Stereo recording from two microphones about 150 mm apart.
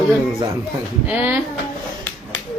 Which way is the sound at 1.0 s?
10° right (ahead or behind).